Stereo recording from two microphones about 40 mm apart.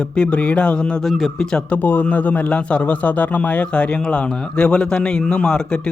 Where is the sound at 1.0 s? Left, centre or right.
Centre.